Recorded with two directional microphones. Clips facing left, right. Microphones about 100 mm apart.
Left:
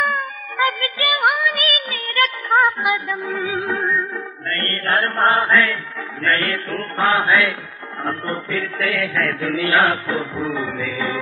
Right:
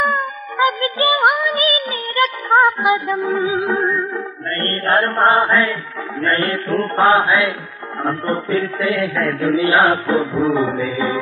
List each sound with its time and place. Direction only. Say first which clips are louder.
0.0 s music: right 3 dB; 25° right (ahead or behind)
4.5 s mantra: right 3 dB; 25° right (ahead or behind)
5.3 s music: right 2 dB; 30° right (ahead or behind)
6.2 s mantra: right 2 dB; 30° right (ahead or behind)
10.4 s music: right 7 dB; 35° right (ahead or behind)